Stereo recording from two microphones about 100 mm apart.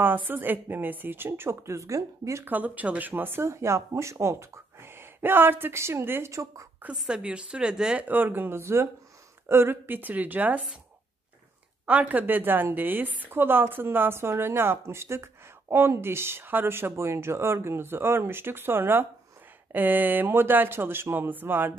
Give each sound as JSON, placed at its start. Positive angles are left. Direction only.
{"t": 0.0, "sound": "speech", "side_deg": -20}
{"t": 2.5, "sound": "speech", "side_deg": -15}
{"t": 7.0, "sound": "speech", "side_deg": -10}
{"t": 11.8, "sound": "speech", "side_deg": -15}